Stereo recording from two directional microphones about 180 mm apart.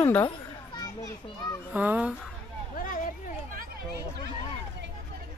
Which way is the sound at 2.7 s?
50° left (ahead or behind).